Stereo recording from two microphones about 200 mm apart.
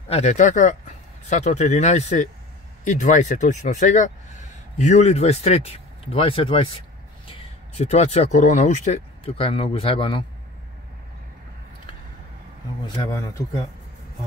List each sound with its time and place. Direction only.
0.1 s speech: 35° left (ahead or behind)
12.8 s speech: 20° left (ahead or behind)